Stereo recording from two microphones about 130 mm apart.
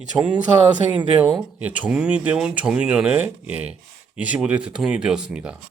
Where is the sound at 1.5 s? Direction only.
10° right (ahead or behind).